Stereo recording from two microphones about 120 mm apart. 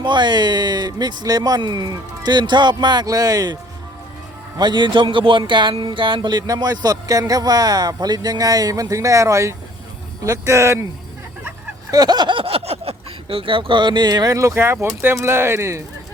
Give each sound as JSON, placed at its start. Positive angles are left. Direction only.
{"t": 0.0, "sound": "music", "side_deg": -40}
{"t": 4.5, "sound": "a man's voice", "side_deg": -40}
{"t": 5.7, "sound": "music", "side_deg": -45}
{"t": 10.2, "sound": "speech", "side_deg": -25}
{"t": 11.9, "sound": "speech", "side_deg": -35}